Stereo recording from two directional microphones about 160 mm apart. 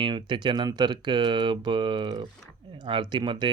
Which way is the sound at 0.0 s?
30° right (ahead or behind).